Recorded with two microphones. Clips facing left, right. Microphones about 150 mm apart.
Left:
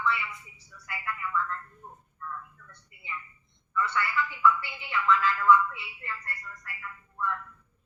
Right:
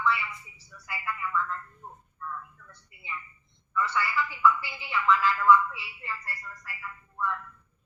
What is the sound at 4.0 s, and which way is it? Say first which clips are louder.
Speech: right 1 dB; 5° right (ahead or behind).